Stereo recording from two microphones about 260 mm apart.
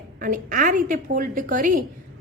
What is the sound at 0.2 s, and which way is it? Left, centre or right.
A woman's voice, right.